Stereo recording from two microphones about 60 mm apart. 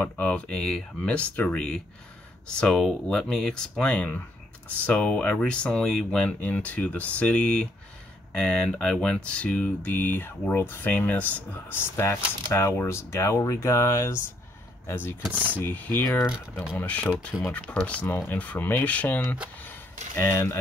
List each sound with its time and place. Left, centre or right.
0.0 s speech: left
0.6 s speech: centre
1.0 s speech: left
1.5 s speech: centre
6.2 s speech: left
10.5 s speech: left
10.8 s speech: left
11.7 s speech: left
15.2 s speech: right
15.6 s speech: left
20.2 s speech: left